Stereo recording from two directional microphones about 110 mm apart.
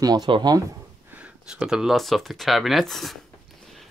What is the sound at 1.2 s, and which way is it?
Speech, 10° right (ahead or behind).